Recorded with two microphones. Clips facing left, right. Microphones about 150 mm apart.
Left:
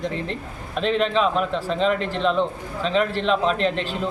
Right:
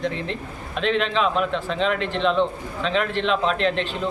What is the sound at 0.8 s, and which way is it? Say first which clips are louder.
Speech: left 1 dB; centre (ahead or behind).